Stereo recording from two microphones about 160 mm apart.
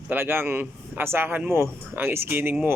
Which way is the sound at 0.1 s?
15° right (ahead or behind).